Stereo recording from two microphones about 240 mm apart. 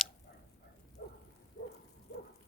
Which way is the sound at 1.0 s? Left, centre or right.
Left.